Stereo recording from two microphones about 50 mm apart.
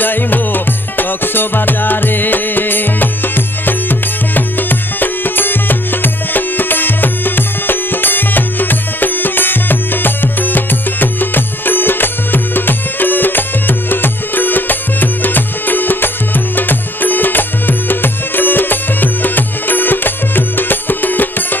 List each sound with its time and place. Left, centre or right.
0.0 s music: left